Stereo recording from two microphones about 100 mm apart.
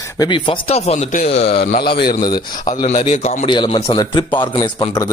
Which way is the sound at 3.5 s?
55° left (ahead or behind).